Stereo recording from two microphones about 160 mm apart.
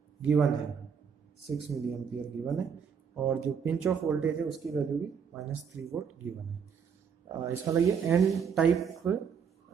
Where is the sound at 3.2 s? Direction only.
10° right (ahead or behind).